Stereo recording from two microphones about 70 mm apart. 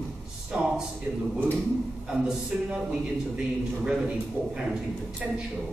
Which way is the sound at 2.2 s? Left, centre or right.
Centre.